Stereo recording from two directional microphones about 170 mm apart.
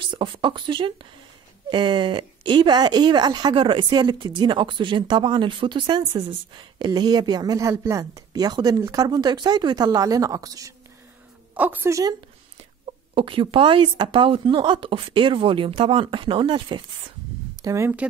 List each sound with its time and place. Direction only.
0.0 s speech: 30° right (ahead or behind)
11.5 s a woman's voice: 10° right (ahead or behind)
12.8 s speech: 30° right (ahead or behind)
17.6 s a woman's voice: 20° right (ahead or behind)